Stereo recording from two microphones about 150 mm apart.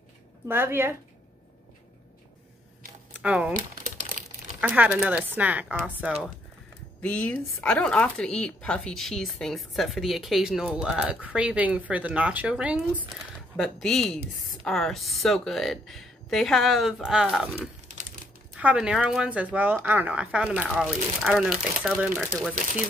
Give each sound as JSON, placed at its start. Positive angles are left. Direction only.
{"t": 0.5, "sound": "speech", "side_deg": -15}
{"t": 3.2, "sound": "speech", "side_deg": -10}
{"t": 4.2, "sound": "crumpling", "side_deg": -65}
{"t": 4.6, "sound": "speech", "side_deg": -10}
{"t": 7.0, "sound": "speech", "side_deg": 10}
{"t": 13.6, "sound": "speech", "side_deg": 0}